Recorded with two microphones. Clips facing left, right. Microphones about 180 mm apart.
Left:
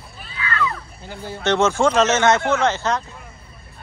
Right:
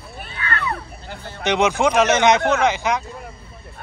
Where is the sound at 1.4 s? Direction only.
15° right (ahead or behind).